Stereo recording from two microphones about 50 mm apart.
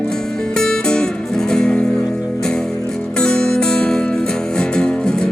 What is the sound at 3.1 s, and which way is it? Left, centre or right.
Music, centre.